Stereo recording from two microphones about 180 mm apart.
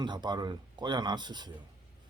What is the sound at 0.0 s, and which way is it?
Speech, 25° right (ahead or behind).